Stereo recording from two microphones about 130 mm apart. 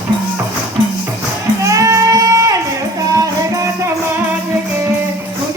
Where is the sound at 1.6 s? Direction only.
25° right (ahead or behind).